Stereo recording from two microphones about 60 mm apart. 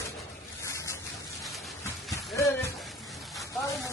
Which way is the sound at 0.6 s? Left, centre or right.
Left.